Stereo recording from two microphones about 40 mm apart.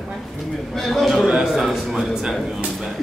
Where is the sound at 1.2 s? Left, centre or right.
Centre.